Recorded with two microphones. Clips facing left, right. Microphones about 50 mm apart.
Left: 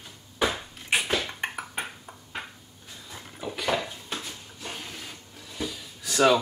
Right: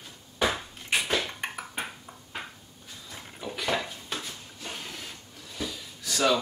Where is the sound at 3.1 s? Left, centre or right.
Centre.